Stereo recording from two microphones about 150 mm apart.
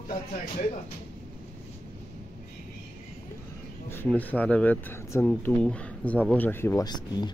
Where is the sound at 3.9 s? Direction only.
10° left (ahead or behind).